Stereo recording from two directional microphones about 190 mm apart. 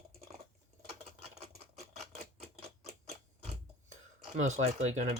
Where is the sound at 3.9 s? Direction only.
40° right (ahead or behind).